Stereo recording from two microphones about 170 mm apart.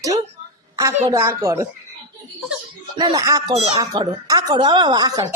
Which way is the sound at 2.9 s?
25° right (ahead or behind).